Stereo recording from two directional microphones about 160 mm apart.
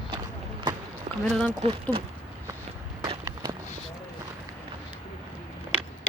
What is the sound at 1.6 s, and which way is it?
Speech, 35° right (ahead or behind).